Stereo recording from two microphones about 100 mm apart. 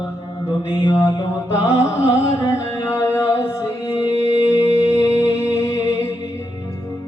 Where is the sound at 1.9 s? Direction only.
30° left (ahead or behind).